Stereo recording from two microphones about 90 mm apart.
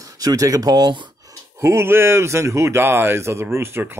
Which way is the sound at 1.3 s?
30° right (ahead or behind).